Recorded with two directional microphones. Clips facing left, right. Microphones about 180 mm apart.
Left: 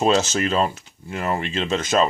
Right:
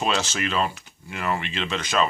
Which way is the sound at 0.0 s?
45° left (ahead or behind).